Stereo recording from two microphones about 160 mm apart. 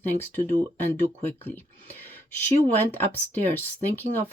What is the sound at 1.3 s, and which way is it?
Speech, 10° left (ahead or behind).